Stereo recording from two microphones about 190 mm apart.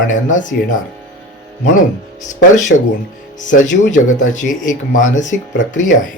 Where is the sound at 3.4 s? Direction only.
40° left (ahead or behind).